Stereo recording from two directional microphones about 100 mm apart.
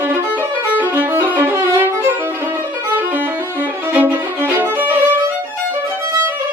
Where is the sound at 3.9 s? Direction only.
15° right (ahead or behind).